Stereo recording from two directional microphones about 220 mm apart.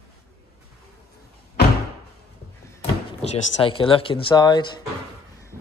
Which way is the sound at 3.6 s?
25° left (ahead or behind).